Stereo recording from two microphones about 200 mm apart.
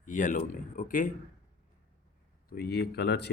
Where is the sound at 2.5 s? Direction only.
50° left (ahead or behind).